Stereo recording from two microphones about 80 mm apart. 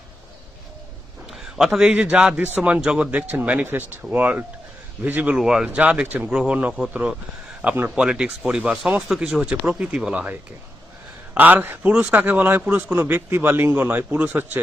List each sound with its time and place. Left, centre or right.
1.3 s a sound: centre
1.9 s a man's voice: centre
5.4 s speech: centre
5.6 s speech: centre
11.3 s a man's voice: right